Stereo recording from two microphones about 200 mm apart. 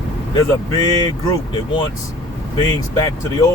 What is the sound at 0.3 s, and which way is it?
Speech, 20° left (ahead or behind).